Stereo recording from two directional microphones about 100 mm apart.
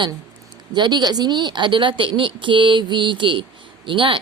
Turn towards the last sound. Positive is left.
turn(degrees=-55)  # may be behind; listen again after turning